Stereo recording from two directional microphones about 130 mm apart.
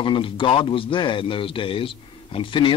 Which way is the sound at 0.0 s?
40° left (ahead or behind).